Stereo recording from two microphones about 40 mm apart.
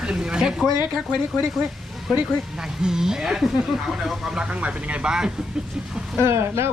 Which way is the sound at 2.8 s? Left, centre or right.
Centre.